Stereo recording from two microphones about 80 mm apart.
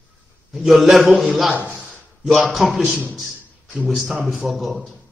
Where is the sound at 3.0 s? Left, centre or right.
Centre.